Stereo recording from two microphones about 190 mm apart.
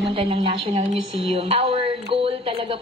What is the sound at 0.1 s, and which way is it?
A woman's voice, 30° right (ahead or behind).